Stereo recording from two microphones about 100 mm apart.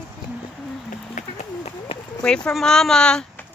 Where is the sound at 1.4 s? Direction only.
90° left.